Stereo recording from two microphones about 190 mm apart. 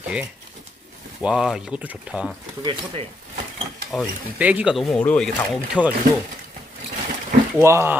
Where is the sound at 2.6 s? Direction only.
30° right (ahead or behind).